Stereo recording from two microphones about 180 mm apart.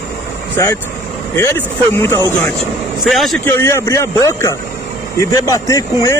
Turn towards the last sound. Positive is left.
turn(degrees=20)  # may be behind; listen again after turning